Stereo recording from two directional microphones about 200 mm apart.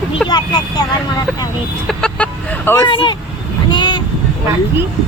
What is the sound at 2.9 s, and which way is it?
Speech, 25° left (ahead or behind).